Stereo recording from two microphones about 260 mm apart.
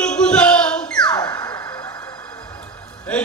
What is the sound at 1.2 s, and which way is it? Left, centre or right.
Music, centre.